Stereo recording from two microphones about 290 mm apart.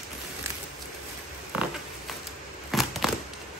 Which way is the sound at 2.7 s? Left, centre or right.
Centre.